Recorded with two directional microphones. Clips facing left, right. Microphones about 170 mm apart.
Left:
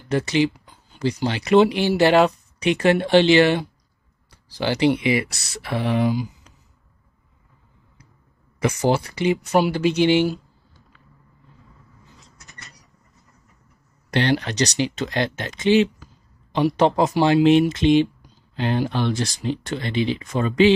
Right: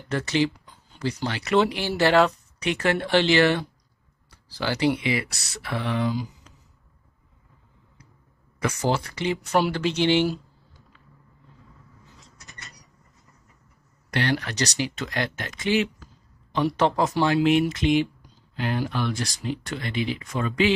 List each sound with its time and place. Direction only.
0.1 s speech: 15° left (ahead or behind)
8.5 s speech: 15° left (ahead or behind)
14.1 s speech: 25° left (ahead or behind)